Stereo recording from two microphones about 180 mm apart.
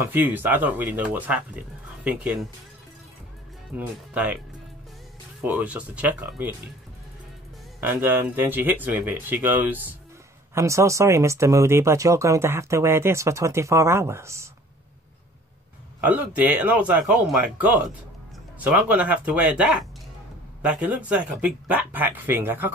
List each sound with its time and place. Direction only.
0.0 s speech: 10° right (ahead or behind)
3.7 s speech: 10° right (ahead or behind)
5.4 s speech: 10° right (ahead or behind)
7.8 s speech: 10° right (ahead or behind)
16.0 s speech: 10° right (ahead or behind)